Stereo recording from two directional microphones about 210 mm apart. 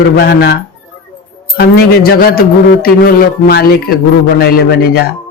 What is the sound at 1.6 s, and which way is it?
A man's voice, 45° left (ahead or behind).